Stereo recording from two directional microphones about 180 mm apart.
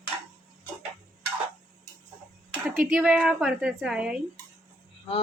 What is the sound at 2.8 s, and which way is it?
A woman's voice, 5° right (ahead or behind).